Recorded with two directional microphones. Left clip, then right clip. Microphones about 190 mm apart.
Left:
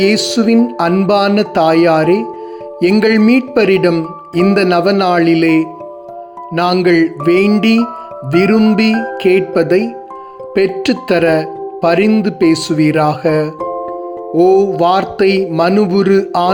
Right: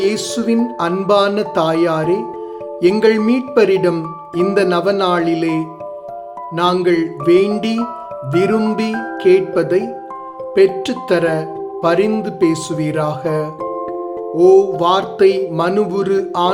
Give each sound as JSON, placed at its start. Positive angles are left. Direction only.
{"t": 0.0, "sound": "music", "side_deg": 20}
{"t": 3.9, "sound": "speech", "side_deg": 10}
{"t": 4.5, "sound": "music", "side_deg": 25}
{"t": 6.5, "sound": "speech", "side_deg": 25}
{"t": 6.8, "sound": "music", "side_deg": 20}
{"t": 10.5, "sound": "speech", "side_deg": 20}
{"t": 12.1, "sound": "music", "side_deg": 20}